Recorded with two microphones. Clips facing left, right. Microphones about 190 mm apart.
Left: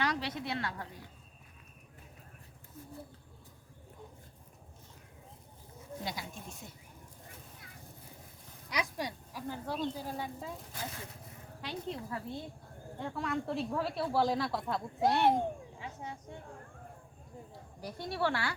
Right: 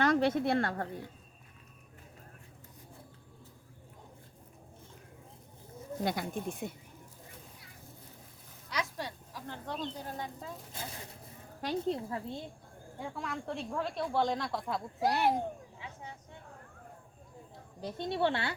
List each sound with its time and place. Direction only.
0.0 s a woman's voice: 50° right (ahead or behind)
6.0 s speech: 55° right (ahead or behind)
8.7 s speech: 15° left (ahead or behind)
10.8 s speech: 25° right (ahead or behind)
11.6 s speech: 45° right (ahead or behind)
11.9 s speech: 25° right (ahead or behind)
13.1 s speech: centre (ahead or behind)
17.7 s speech: 25° right (ahead or behind)